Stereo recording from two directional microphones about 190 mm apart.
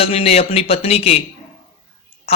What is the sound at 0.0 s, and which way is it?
A man's voice, 30° left (ahead or behind).